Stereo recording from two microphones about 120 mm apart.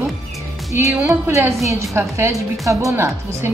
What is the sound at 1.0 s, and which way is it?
A woman's voice, 20° right (ahead or behind).